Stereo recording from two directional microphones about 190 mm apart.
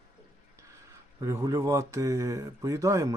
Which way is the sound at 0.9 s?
15° right (ahead or behind).